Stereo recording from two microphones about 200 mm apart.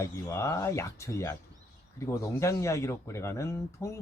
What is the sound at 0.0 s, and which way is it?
Speech, 15° left (ahead or behind).